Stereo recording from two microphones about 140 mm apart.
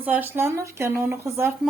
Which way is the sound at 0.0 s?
10° right (ahead or behind).